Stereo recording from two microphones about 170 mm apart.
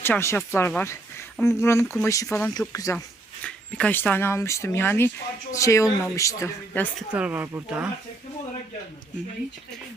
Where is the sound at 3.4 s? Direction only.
10° left (ahead or behind).